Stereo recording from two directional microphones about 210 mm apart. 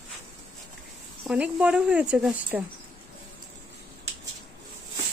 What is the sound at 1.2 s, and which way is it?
Speech, 5° right (ahead or behind).